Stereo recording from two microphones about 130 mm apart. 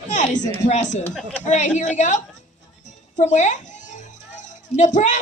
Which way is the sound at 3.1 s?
65° left (ahead or behind).